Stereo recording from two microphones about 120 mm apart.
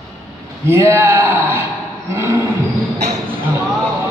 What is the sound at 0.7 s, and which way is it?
A woman's voice, 25° right (ahead or behind).